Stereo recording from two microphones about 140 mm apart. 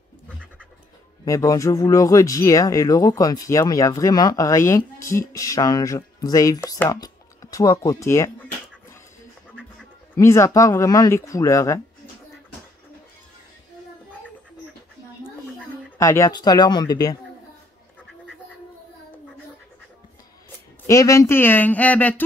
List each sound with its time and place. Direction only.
1.2 s speech: 25° left (ahead or behind)
10.1 s speech: 20° left (ahead or behind)
16.0 s speech: 20° left (ahead or behind)
20.8 s speech: 25° left (ahead or behind)